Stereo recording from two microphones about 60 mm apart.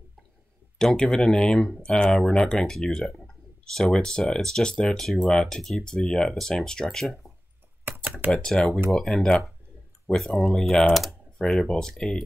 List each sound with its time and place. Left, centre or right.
0.7 s speech: centre
7.8 s computer keyboard: right
8.3 s speech: centre